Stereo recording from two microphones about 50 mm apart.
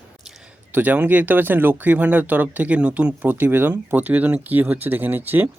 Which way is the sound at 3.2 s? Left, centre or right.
Right.